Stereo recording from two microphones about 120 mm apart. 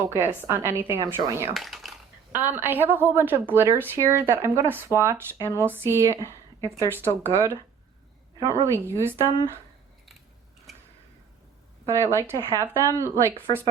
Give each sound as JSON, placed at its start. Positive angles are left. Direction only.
{"t": 0.1, "sound": "a woman's voice", "side_deg": -20}
{"t": 1.5, "sound": "a sound", "side_deg": 0}
{"t": 2.3, "sound": "a woman's voice", "side_deg": -15}
{"t": 11.9, "sound": "a woman's voice", "side_deg": -25}